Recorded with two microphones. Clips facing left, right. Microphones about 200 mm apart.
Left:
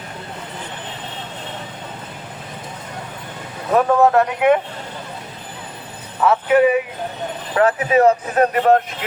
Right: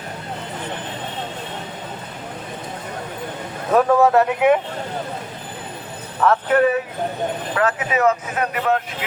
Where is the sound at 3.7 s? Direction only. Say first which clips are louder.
Even; centre (ahead or behind).